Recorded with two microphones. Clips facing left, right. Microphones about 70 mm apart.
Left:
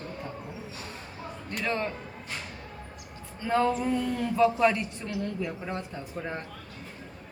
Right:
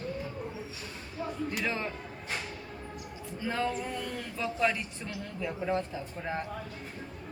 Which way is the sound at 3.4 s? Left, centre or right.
Centre.